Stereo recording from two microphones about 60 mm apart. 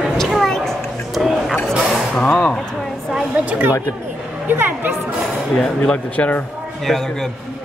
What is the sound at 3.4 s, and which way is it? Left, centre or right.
Speech, right.